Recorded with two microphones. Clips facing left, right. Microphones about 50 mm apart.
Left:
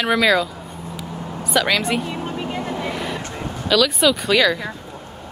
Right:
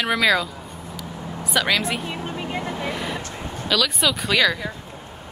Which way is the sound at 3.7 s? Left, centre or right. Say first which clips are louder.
Left 5 dB; centre.